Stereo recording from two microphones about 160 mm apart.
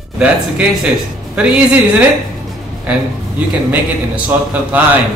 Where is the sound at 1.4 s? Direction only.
5° right (ahead or behind).